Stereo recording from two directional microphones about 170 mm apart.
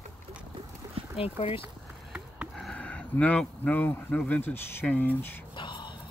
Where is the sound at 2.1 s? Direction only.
Centre (ahead or behind).